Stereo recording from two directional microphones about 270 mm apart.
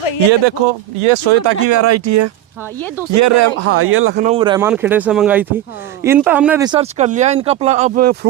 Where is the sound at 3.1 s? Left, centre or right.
Right.